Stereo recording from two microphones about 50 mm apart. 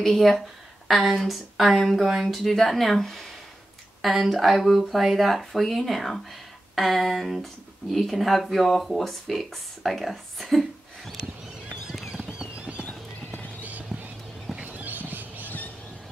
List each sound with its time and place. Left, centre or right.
0.0 s speech: centre
11.9 s clip-clop: centre
12.4 s clip-clop: right
12.8 s clip-clop: left
13.6 s clip-clop: right
14.6 s horse: right